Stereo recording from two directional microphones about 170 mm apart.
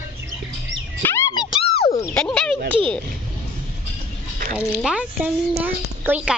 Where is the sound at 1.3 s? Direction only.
30° left (ahead or behind).